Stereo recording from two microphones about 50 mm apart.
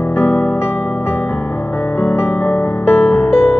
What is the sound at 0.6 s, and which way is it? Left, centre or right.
Music, left.